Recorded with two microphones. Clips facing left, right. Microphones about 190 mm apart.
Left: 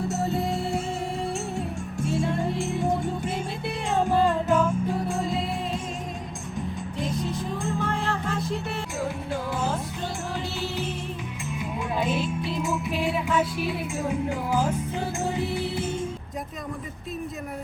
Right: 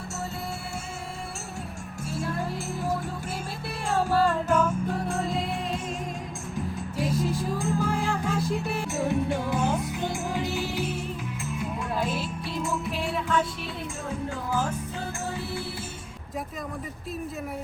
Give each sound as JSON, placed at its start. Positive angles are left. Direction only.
{"t": 2.0, "sound": "music", "side_deg": 0}
{"t": 3.9, "sound": "music", "side_deg": 20}
{"t": 4.3, "sound": "music", "side_deg": 0}
{"t": 7.0, "sound": "music", "side_deg": 0}
{"t": 9.0, "sound": "music", "side_deg": -20}
{"t": 11.6, "sound": "music", "side_deg": 0}
{"t": 14.1, "sound": "music", "side_deg": 15}